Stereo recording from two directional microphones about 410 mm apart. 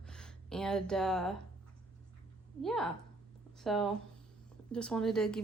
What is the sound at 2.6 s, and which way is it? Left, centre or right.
Speech, centre.